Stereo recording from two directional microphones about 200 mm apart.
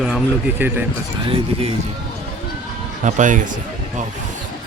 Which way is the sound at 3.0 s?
40° right (ahead or behind).